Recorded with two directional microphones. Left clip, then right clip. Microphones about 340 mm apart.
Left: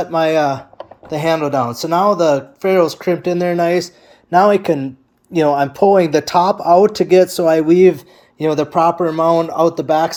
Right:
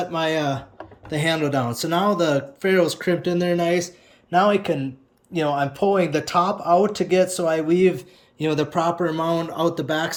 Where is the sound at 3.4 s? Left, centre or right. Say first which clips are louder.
Left 7 dB; centre.